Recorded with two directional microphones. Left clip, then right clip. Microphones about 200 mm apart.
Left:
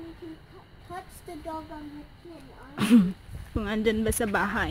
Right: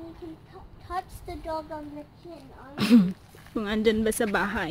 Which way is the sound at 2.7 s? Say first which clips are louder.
Right 1 dB; 5° left (ahead or behind).